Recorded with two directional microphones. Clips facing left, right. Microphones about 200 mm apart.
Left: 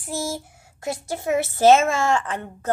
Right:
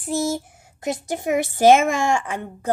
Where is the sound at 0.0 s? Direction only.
20° right (ahead or behind).